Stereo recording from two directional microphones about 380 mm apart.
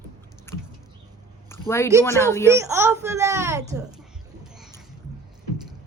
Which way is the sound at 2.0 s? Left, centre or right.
Centre.